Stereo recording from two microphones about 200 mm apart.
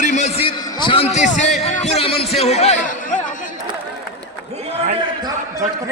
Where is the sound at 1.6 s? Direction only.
35° left (ahead or behind).